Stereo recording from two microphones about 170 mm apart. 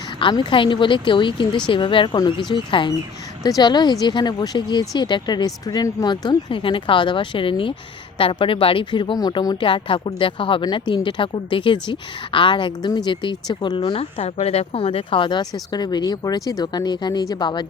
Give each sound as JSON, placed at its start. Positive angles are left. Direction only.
{"t": 0.2, "sound": "speech", "side_deg": 30}